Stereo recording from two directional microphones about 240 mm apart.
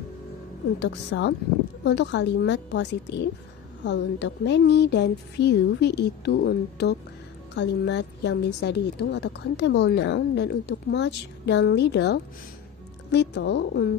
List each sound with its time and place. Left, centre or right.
0.7 s a woman's voice: left